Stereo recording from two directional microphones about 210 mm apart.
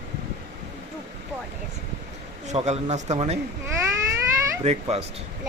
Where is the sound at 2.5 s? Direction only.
30° right (ahead or behind).